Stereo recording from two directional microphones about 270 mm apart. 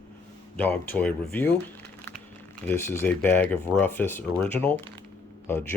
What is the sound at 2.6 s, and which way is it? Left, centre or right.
Speech, centre.